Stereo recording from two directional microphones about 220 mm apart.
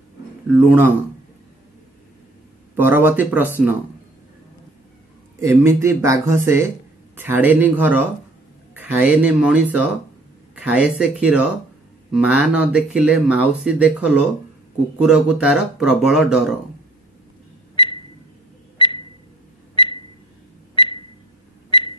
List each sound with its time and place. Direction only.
0.5 s speech: 10° right (ahead or behind)
2.7 s speech: 10° right (ahead or behind)
5.4 s speech: 10° right (ahead or behind)
17.7 s a sound: 20° left (ahead or behind)